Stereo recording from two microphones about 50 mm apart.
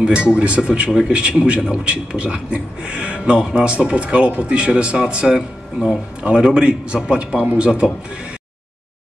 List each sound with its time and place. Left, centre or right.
0.0 s a man's voice: right